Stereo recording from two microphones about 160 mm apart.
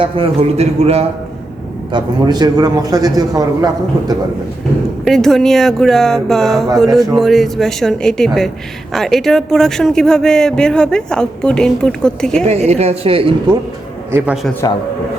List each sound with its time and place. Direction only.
0.0 s a woman's voice: 40° right (ahead or behind)
1.9 s a man's voice: 25° right (ahead or behind)
5.0 s a man's voice: centre (ahead or behind)
12.5 s a woman's voice: 40° right (ahead or behind)
14.1 s a man's voice: 15° right (ahead or behind)